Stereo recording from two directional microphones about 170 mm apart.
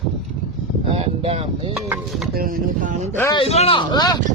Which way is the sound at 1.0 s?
35° right (ahead or behind).